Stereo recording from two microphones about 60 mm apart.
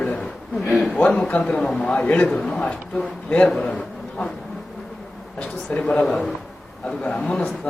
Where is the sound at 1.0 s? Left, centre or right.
Left.